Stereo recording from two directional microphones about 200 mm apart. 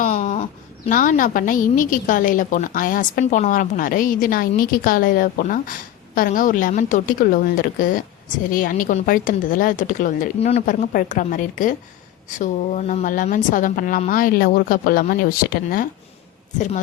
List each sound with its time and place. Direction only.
0.0 s a sound: 40° left (ahead or behind)
0.9 s a woman's voice: 40° left (ahead or behind)
16.6 s a woman's voice: 40° left (ahead or behind)